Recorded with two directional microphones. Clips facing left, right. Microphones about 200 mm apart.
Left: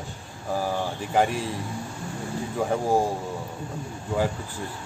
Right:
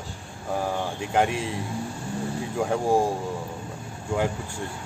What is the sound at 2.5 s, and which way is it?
Speech, centre (ahead or behind).